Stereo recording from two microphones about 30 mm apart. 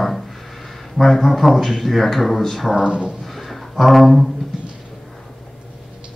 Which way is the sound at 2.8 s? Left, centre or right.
Right.